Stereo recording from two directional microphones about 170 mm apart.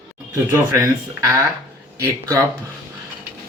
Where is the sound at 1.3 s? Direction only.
15° right (ahead or behind).